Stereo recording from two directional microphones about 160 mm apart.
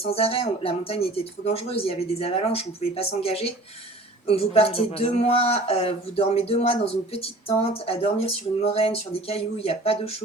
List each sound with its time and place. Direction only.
0.0 s speech: 40° left (ahead or behind)